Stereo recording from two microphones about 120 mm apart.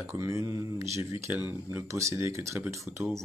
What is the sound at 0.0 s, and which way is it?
Speech, 25° right (ahead or behind).